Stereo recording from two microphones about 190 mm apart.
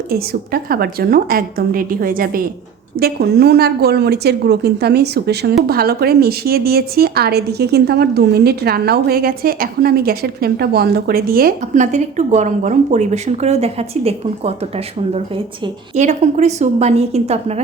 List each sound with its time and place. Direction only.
0.1 s a woman's voice: 55° right (ahead or behind); by 14.5 s 30° right (ahead or behind)
16.0 s a woman's voice: 40° right (ahead or behind)